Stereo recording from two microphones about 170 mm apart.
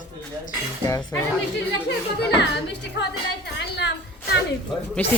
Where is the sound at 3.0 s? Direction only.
85° left.